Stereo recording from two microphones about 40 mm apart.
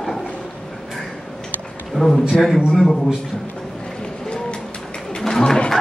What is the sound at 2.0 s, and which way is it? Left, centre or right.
Speech, centre.